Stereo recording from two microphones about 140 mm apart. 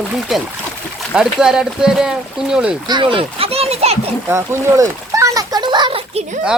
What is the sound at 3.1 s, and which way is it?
Speech, 45° right (ahead or behind).